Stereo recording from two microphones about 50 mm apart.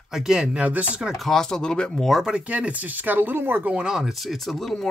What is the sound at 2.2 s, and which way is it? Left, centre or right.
Speech, right.